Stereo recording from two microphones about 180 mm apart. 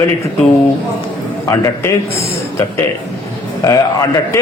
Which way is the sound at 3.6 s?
20° left (ahead or behind).